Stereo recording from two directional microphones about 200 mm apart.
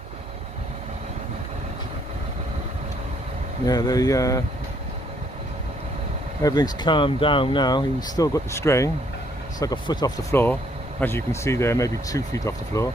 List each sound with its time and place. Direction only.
3.7 s speech: 20° left (ahead or behind)
6.4 s speech: 20° left (ahead or behind)
10.3 s speech: 10° left (ahead or behind)